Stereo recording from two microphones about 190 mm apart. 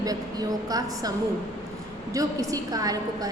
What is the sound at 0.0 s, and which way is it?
A woman's voice, 20° right (ahead or behind).